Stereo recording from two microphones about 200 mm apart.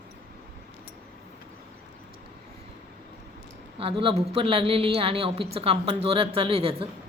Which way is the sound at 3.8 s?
25° right (ahead or behind).